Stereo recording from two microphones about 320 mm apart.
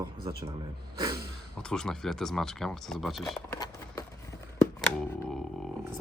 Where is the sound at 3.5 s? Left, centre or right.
Centre.